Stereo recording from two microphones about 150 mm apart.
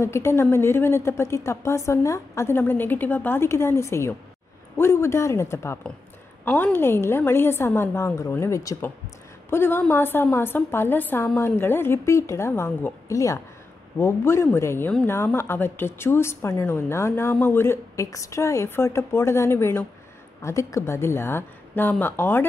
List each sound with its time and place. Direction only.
0.0 s a woman's voice: 15° left (ahead or behind)